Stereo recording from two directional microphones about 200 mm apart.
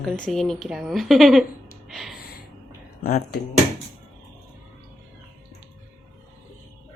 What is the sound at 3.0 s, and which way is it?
Speech, 50° left (ahead or behind).